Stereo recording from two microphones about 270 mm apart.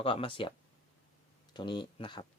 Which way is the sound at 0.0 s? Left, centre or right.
Centre.